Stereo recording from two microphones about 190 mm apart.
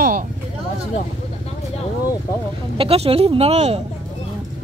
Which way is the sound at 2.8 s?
30° right (ahead or behind).